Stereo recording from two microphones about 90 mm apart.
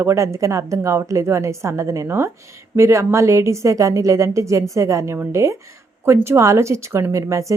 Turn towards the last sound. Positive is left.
turn(degrees=-35)  # may be behind; listen again after turning